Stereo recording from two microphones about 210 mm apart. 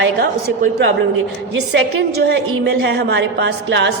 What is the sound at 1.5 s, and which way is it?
A woman's voice, 55° right (ahead or behind).